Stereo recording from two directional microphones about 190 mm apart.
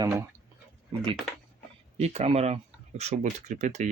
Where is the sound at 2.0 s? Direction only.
35° right (ahead or behind).